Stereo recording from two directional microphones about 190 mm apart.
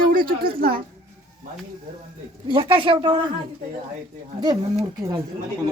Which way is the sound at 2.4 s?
25° right (ahead or behind).